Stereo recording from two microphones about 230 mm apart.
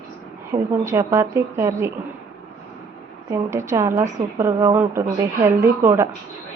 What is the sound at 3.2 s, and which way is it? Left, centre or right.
A woman's voice, centre.